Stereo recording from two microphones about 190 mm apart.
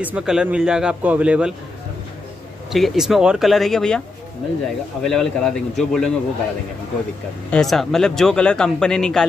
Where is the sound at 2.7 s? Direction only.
Centre (ahead or behind).